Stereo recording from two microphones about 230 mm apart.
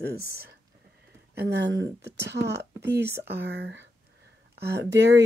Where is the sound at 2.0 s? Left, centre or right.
Right.